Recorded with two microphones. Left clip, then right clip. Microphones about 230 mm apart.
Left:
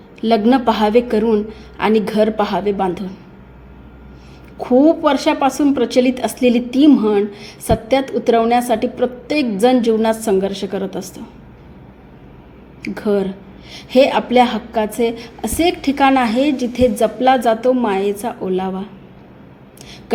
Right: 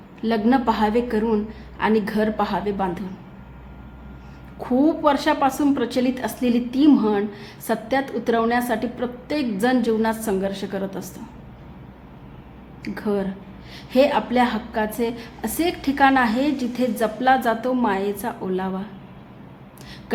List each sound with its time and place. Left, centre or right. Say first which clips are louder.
0.2 s a woman's voice: left 6 dB; left
4.5 s a woman's voice: left 8 dB; centre
12.8 s a woman's voice: left 7 dB; centre